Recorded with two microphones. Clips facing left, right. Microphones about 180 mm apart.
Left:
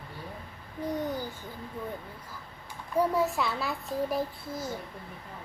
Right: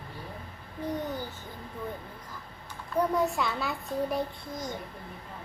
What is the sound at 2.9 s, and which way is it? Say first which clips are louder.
A child's voice: even; 5° left (ahead or behind).